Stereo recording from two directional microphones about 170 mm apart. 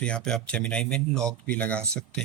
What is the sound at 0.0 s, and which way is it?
Speech, 5° left (ahead or behind).